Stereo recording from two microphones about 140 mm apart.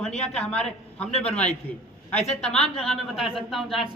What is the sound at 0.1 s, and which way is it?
Speech, 50° left (ahead or behind).